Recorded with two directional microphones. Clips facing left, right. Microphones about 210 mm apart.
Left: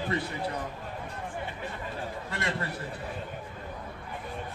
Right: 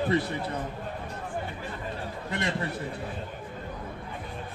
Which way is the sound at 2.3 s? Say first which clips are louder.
Right 4 dB; 15° right (ahead or behind).